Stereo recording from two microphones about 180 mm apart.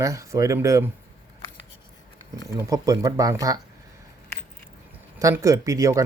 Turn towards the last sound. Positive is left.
turn(degrees=-15)  # may be behind; listen again after turning